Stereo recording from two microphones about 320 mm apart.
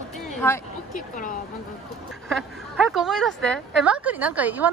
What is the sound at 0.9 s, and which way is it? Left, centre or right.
Speech, left.